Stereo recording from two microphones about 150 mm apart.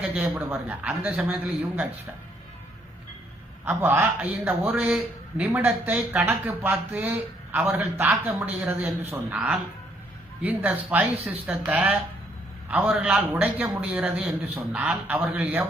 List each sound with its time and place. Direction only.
0.1 s speech: 10° right (ahead or behind)
3.7 s speech: 15° right (ahead or behind)